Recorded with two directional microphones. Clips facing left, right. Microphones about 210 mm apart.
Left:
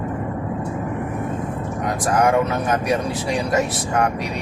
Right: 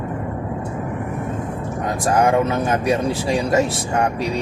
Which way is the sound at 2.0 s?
25° right (ahead or behind).